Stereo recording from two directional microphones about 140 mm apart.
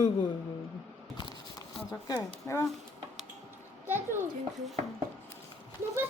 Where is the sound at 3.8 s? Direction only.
15° right (ahead or behind).